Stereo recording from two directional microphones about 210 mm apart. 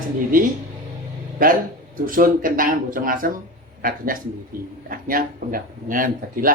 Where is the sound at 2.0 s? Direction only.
40° right (ahead or behind).